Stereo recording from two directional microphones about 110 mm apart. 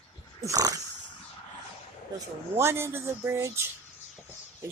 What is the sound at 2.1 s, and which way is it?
Speech, 25° right (ahead or behind).